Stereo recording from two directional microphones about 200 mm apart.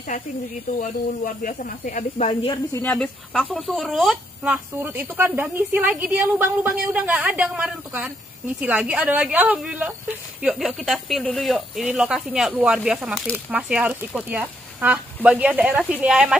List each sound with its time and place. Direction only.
0.7 s speech: 45° left (ahead or behind)
2.5 s speech: 10° left (ahead or behind)